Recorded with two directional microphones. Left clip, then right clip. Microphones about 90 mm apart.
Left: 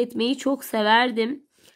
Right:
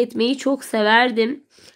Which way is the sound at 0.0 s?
30° left (ahead or behind).